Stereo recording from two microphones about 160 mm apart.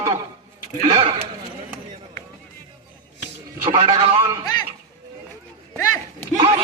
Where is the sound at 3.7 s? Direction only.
30° right (ahead or behind).